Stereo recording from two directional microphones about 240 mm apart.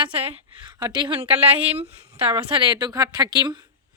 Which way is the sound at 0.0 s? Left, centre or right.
Right.